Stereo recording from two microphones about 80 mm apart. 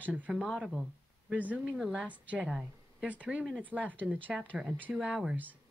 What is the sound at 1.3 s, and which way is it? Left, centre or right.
Speech, centre.